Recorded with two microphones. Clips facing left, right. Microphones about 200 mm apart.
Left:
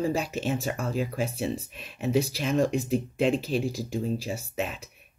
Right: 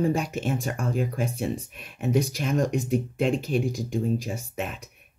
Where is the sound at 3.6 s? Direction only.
5° left (ahead or behind).